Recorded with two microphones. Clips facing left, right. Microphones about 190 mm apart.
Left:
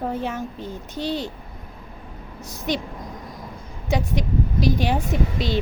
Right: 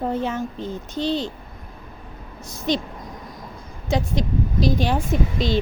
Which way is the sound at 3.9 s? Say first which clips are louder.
Right 1 dB; 10° left (ahead or behind).